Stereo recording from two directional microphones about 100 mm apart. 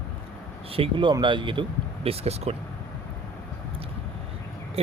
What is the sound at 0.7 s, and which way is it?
Speech, 60° right (ahead or behind).